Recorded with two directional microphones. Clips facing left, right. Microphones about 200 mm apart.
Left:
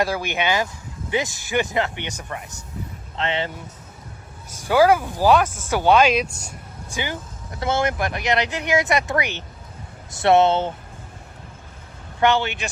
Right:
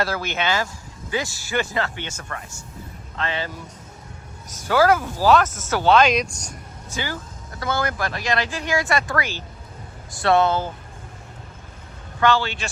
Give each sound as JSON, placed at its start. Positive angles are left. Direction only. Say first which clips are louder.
{"t": 0.0, "sound": "speech", "louder": "left 2 dB", "side_deg": 15}
{"t": 4.4, "sound": "speech", "louder": "left 2 dB", "side_deg": 10}
{"t": 12.2, "sound": "speech", "louder": "left 1 dB", "side_deg": 20}